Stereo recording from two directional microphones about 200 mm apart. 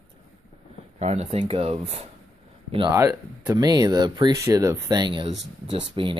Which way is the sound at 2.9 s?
15° right (ahead or behind).